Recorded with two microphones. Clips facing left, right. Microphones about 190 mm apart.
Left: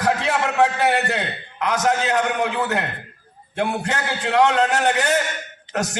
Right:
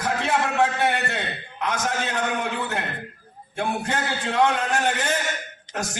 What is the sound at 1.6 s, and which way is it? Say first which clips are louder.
A man's voice: left 6 dB; 70° left (ahead or behind).